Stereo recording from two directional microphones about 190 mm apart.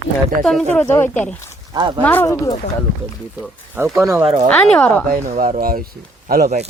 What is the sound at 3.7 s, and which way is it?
Speech, 15° right (ahead or behind).